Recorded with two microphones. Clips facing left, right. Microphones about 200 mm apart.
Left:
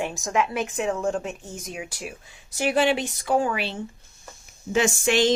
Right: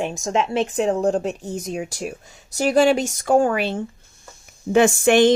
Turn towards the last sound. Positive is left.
turn(degrees=-55)  # may be behind; listen again after turning